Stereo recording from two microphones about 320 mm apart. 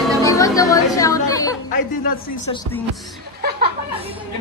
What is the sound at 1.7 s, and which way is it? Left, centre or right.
Speech, left.